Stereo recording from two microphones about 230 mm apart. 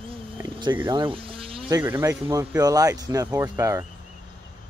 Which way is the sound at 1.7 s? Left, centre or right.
Centre.